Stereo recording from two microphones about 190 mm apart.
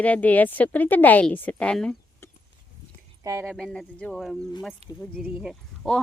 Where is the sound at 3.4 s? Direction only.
Centre (ahead or behind).